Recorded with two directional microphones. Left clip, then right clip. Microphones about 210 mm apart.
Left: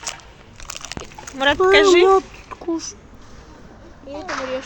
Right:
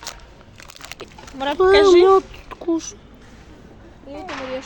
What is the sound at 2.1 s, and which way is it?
Speech, 20° right (ahead or behind).